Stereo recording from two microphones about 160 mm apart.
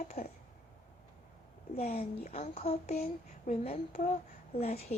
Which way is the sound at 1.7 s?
40° left (ahead or behind).